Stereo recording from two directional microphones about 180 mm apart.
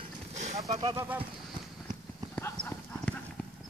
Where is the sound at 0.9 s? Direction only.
10° right (ahead or behind).